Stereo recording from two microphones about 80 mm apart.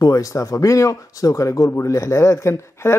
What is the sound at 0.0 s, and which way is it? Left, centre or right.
Speech, left.